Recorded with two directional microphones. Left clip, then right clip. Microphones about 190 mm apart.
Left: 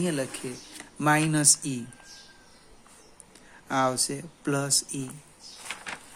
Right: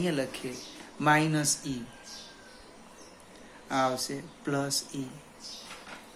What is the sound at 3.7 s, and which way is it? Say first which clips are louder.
Speech: left 3 dB; 50° left (ahead or behind).